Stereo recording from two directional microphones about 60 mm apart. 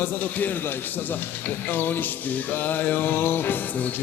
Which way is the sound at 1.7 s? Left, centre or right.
Left.